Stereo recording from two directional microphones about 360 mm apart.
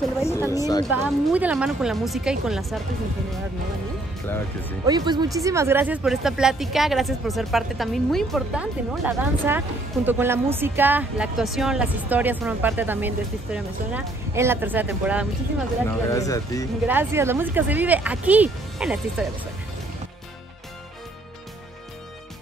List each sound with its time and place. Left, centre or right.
0.5 s speech: centre
0.8 s a woman's voice: centre
4.8 s a woman's voice: centre
16.1 s speech: centre
16.8 s a woman's voice: centre